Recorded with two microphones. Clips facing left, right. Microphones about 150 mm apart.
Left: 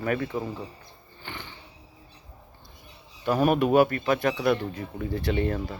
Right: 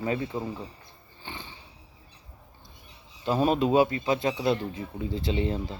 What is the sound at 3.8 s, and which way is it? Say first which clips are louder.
Speech: left 2 dB; 60° left (ahead or behind).